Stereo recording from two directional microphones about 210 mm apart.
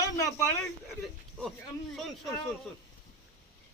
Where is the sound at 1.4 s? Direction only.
5° left (ahead or behind).